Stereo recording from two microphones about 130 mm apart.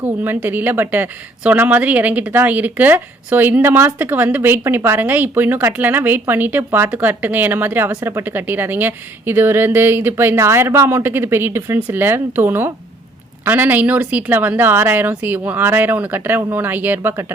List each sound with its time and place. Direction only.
0.0 s speech: 15° right (ahead or behind)